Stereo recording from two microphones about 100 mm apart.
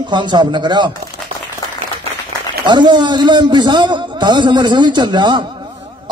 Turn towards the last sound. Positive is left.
turn(degrees=-50)  # may be behind; listen again after turning